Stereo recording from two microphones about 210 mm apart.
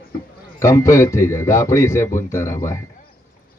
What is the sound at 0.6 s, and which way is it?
Speech, 15° left (ahead or behind).